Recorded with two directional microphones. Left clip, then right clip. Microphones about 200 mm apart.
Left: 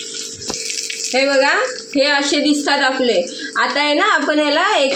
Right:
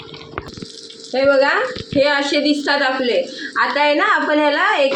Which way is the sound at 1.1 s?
25° left (ahead or behind).